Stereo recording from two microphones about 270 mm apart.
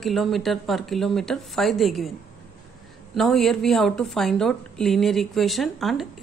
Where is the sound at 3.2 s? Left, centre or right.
Centre.